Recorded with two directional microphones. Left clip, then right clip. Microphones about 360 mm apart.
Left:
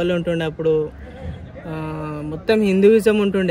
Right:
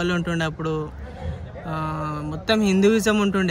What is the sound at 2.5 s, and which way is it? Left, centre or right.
Speech, centre.